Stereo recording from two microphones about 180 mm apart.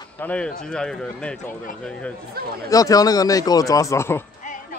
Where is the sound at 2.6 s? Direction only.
20° left (ahead or behind).